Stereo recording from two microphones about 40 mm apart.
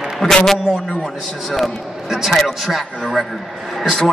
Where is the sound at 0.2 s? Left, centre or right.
Left.